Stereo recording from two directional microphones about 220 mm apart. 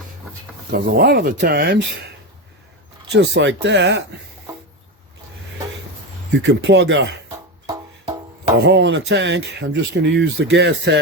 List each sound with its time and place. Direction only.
0.7 s speech: 45° right (ahead or behind)
3.1 s speech: 50° right (ahead or behind)
6.3 s speech: 50° right (ahead or behind)
8.6 s speech: 50° right (ahead or behind)